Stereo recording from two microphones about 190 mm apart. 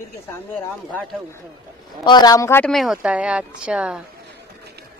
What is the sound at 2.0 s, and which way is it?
Speech, 20° left (ahead or behind).